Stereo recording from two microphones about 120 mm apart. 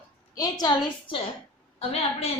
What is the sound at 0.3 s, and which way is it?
Speech, 35° left (ahead or behind).